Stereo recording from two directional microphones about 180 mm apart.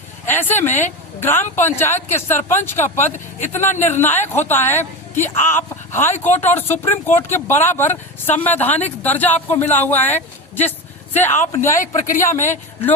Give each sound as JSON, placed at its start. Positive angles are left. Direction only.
{"t": 0.3, "sound": "speech", "side_deg": 10}
{"t": 12.0, "sound": "speech", "side_deg": 50}
{"t": 12.3, "sound": "speech", "side_deg": 15}